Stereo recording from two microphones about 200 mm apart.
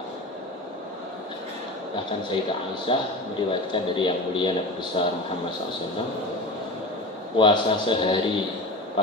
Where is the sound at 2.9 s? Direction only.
25° left (ahead or behind).